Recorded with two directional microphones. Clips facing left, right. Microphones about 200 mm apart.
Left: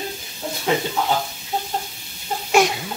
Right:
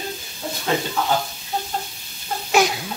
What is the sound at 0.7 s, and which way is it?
Speech, 15° left (ahead or behind).